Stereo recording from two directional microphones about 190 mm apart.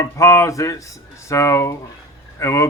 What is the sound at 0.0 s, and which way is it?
Speech, 15° left (ahead or behind).